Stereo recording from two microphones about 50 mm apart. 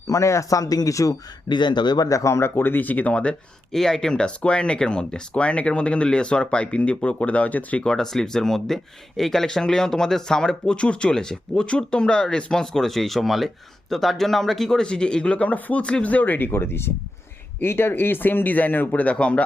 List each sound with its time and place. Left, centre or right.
0.1 s speech: left
2.1 s speech: left
2.6 s speech: left
3.1 s speech: left
3.7 s speech: centre; by 7.9 s left
7.9 s speech: centre; by 16.5 s left
16.5 s speech: left